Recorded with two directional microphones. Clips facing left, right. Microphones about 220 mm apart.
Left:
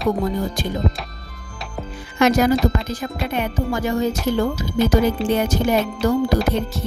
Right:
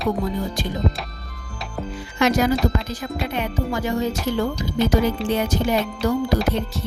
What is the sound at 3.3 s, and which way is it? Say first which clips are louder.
Speech: left 3 dB; 50° left (ahead or behind).